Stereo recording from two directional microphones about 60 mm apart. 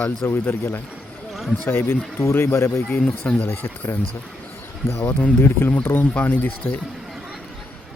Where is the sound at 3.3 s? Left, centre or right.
Left.